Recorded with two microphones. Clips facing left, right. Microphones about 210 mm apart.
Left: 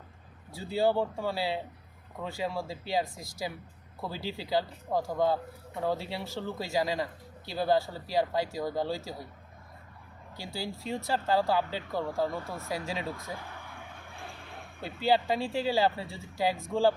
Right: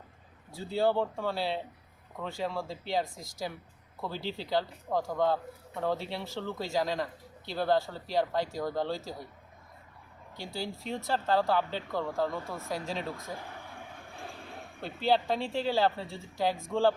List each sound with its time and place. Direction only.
0.5 s speech: 10° left (ahead or behind)
10.3 s speech: 5° left (ahead or behind)
14.8 s speech: 10° left (ahead or behind)